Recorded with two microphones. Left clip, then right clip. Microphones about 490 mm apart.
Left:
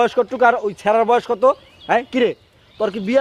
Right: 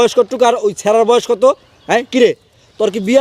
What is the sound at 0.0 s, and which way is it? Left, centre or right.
A man's voice, right.